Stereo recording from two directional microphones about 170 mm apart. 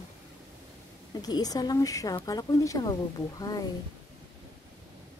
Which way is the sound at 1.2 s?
20° left (ahead or behind).